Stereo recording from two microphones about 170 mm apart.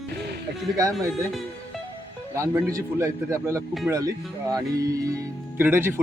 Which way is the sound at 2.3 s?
15° right (ahead or behind).